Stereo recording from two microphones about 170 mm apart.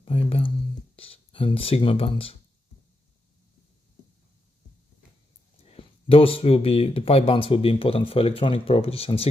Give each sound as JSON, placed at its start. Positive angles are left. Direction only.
{"t": 0.0, "sound": "a sound", "side_deg": 35}
{"t": 0.9, "sound": "speech", "side_deg": 35}
{"t": 5.7, "sound": "speech", "side_deg": 35}